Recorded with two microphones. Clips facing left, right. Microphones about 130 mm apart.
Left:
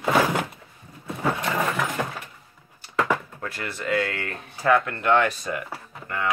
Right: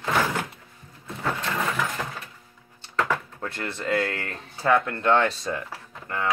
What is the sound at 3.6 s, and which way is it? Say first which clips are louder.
Speech: right 1 dB; 30° right (ahead or behind).